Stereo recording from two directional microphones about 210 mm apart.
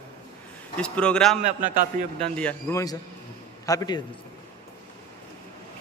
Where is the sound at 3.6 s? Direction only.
15° left (ahead or behind).